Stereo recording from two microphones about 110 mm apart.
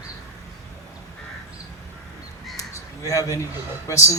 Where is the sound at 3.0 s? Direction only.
30° left (ahead or behind).